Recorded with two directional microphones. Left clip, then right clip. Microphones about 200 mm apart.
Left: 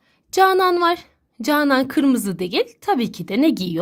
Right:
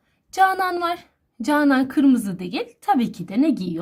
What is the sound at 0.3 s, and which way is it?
A woman's voice, 30° left (ahead or behind).